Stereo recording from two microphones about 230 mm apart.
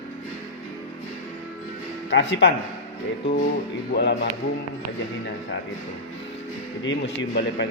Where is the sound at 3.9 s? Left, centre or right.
Left.